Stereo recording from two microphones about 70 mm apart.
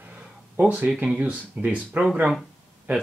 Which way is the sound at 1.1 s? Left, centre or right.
Centre.